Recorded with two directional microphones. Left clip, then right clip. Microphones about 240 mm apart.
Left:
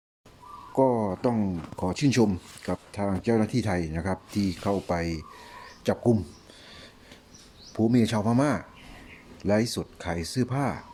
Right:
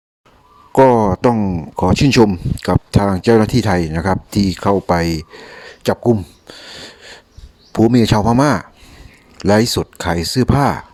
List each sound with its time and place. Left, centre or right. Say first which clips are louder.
0.7 s speech: right 13 dB; right
5.6 s a sound: right 10 dB; right
7.7 s speech: right 12 dB; right